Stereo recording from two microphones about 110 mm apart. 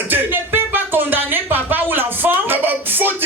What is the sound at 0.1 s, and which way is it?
Music, 20° right (ahead or behind).